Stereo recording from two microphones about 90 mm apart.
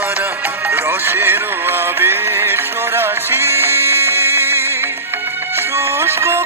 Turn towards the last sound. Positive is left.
turn(degrees=-30)  # may be behind; listen again after turning